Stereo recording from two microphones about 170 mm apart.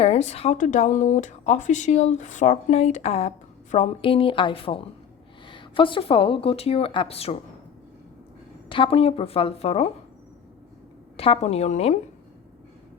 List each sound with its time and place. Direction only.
0.0 s speech: 40° left (ahead or behind)
8.7 s speech: 30° left (ahead or behind)
11.2 s speech: 35° left (ahead or behind)